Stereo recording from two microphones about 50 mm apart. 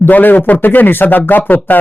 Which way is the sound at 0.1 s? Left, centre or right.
Left.